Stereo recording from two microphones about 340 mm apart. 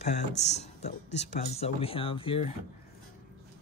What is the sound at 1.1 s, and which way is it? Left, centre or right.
Speech, left.